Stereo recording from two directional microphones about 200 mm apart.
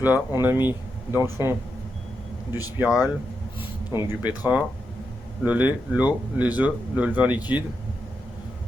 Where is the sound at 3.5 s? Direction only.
10° right (ahead or behind).